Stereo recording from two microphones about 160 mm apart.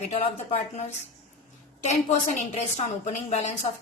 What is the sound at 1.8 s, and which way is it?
A woman's voice, 45° left (ahead or behind).